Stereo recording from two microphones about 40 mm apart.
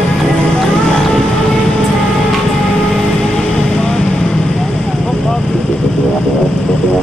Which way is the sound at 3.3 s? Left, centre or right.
Centre.